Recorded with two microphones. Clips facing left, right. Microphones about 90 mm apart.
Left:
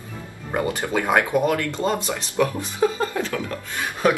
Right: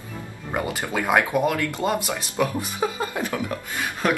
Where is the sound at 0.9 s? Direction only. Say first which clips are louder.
Left 1 dB; 10° right (ahead or behind).